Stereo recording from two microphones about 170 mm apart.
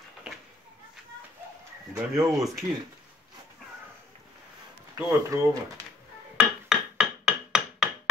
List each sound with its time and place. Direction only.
2.0 s speech: 15° right (ahead or behind)
4.9 s speech: 20° right (ahead or behind)
6.3 s a sound: 5° right (ahead or behind)